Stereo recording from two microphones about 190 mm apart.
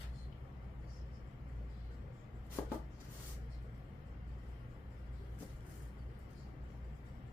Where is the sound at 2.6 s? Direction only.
10° left (ahead or behind).